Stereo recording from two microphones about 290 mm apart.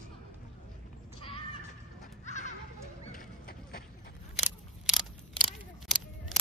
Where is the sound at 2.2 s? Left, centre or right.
Left.